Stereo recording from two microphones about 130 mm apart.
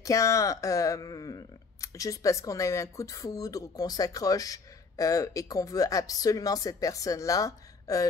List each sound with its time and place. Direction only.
0.0 s speech: 25° left (ahead or behind)